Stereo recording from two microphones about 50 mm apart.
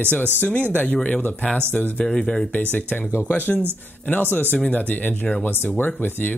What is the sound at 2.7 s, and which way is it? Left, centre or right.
Speech, left.